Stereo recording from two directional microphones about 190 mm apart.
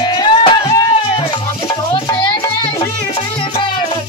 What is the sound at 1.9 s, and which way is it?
Music, 25° left (ahead or behind).